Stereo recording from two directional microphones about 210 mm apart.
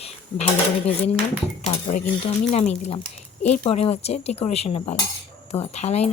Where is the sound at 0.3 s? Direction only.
30° left (ahead or behind).